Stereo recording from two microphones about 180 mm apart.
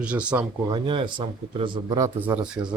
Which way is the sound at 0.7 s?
25° right (ahead or behind).